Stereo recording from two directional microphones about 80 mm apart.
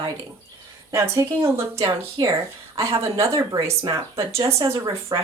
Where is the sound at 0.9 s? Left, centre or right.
Right.